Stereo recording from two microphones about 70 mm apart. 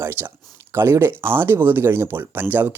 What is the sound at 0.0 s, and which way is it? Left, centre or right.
Speech, right.